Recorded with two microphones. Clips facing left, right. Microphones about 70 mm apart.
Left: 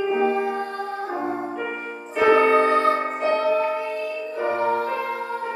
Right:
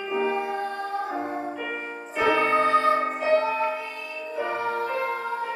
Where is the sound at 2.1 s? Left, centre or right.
Centre.